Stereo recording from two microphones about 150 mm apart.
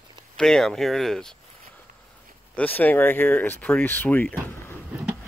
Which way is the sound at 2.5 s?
10° left (ahead or behind).